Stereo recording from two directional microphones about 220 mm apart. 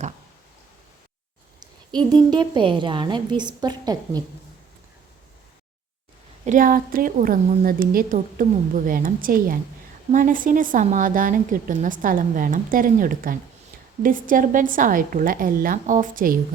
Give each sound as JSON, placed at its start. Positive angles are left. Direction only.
{"t": 1.5, "sound": "a woman's voice", "side_deg": -20}
{"t": 6.4, "sound": "a woman's voice", "side_deg": -35}